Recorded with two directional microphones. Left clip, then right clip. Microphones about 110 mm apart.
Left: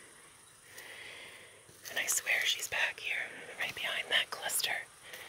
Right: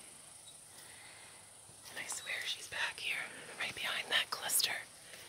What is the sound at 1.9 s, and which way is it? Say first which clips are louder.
Whispering: left 10 dB; 30° left (ahead or behind).